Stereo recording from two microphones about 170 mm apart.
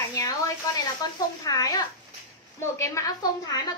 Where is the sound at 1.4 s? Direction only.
25° left (ahead or behind).